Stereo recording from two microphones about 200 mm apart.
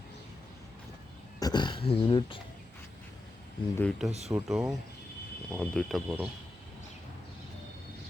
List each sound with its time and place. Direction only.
1.4 s speech: 20° left (ahead or behind)
3.8 s speech: centre (ahead or behind)